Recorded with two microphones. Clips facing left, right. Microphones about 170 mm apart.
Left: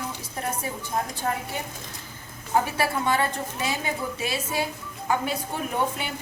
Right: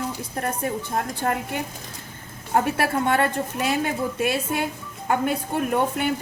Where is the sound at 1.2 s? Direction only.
60° right (ahead or behind).